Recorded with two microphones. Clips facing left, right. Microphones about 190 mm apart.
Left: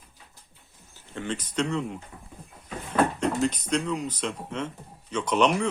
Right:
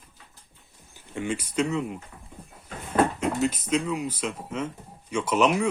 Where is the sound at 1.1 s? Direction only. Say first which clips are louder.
Right 2 dB; 10° right (ahead or behind).